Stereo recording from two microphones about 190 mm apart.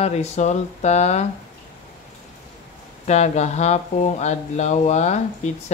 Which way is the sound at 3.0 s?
35° left (ahead or behind).